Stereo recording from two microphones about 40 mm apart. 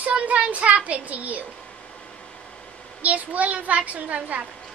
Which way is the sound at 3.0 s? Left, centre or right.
Right.